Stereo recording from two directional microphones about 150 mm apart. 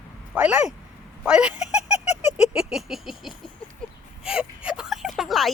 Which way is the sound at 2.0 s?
45° left (ahead or behind).